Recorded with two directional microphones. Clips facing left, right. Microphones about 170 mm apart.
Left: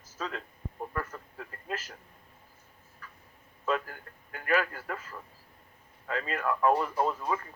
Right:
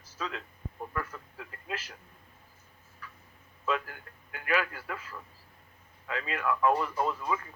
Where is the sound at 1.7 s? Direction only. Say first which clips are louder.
Left 2 dB; 45° left (ahead or behind).